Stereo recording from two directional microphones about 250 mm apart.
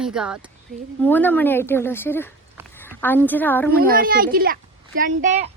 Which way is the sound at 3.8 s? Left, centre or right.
Right.